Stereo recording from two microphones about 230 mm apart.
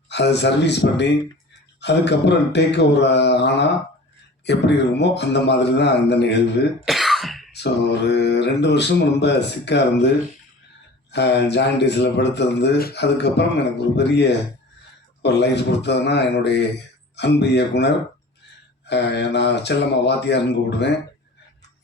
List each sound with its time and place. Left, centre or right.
0.1 s speech: left
6.8 s throat clearing: centre
7.5 s speech: left
11.1 s speech: left